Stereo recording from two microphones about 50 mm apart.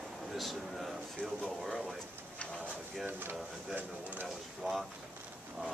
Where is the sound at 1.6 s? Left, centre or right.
Centre.